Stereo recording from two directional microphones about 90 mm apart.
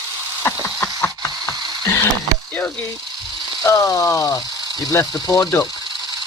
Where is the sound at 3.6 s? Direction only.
45° left (ahead or behind).